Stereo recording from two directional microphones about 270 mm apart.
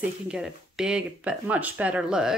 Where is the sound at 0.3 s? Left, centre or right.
Centre.